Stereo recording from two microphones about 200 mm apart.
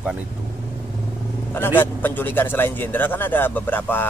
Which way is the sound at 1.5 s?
10° left (ahead or behind).